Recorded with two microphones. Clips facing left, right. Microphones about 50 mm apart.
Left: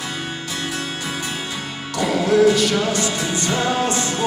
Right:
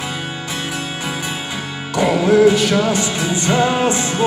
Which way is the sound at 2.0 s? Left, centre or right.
Right.